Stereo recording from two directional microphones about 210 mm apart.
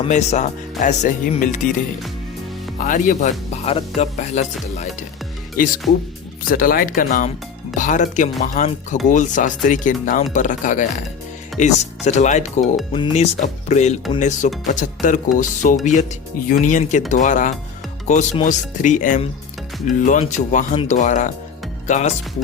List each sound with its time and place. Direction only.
0.0 s speech: 35° left (ahead or behind)
2.7 s speech: 40° left (ahead or behind)